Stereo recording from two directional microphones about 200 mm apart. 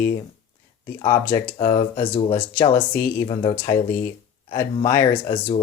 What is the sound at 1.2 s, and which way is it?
Speech, 10° left (ahead or behind).